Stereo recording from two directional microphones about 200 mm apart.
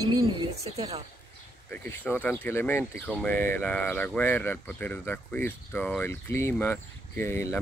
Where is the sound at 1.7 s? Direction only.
10° left (ahead or behind).